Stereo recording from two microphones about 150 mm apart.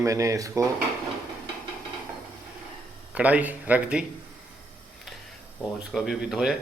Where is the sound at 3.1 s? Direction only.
10° right (ahead or behind).